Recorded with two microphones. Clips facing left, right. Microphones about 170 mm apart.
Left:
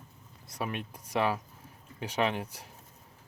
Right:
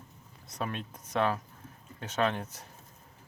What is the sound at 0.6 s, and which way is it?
Speech, 10° left (ahead or behind).